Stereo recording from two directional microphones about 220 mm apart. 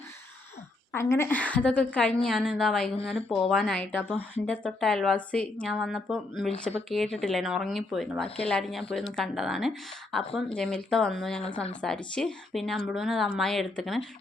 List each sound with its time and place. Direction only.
0.9 s speech: 10° left (ahead or behind)